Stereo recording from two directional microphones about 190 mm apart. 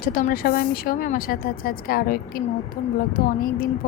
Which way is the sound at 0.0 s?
50° left (ahead or behind).